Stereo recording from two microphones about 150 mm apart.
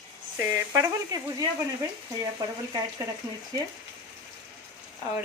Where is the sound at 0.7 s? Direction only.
25° right (ahead or behind).